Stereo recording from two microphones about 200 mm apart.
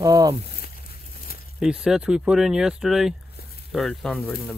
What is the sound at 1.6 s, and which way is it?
Speech, 5° right (ahead or behind).